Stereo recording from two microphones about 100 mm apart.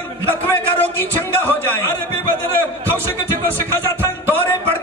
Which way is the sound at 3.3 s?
25° left (ahead or behind).